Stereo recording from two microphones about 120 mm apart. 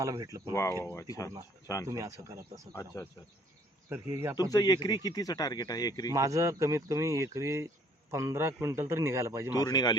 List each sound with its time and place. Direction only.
0.0 s speech: 25° right (ahead or behind)
0.5 s speech: 25° left (ahead or behind)
1.9 s speech: 25° right (ahead or behind)
2.7 s speech: 25° left (ahead or behind)
3.8 s speech: 20° right (ahead or behind)
4.4 s speech: 35° left (ahead or behind)
6.1 s speech: 25° right (ahead or behind)
9.6 s speech: 35° left (ahead or behind)